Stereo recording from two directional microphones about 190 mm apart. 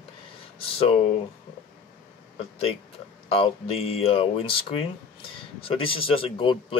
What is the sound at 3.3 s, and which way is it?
Speech, 30° left (ahead or behind).